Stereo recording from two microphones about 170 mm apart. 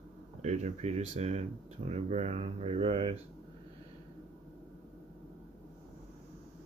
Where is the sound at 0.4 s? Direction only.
45° right (ahead or behind).